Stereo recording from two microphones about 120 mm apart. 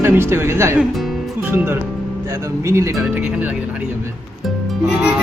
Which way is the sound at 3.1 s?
10° right (ahead or behind).